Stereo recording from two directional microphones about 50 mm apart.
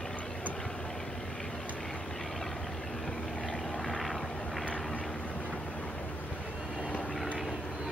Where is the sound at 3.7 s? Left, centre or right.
Centre.